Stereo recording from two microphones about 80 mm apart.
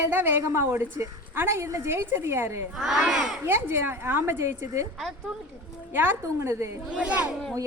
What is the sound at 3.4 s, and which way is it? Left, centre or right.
A woman's voice, right.